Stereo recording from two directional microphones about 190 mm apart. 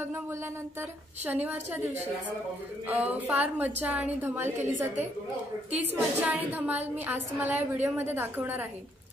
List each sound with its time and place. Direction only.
0.0 s a woman's voice: 10° right (ahead or behind)
2.9 s a woman's voice: 10° right (ahead or behind)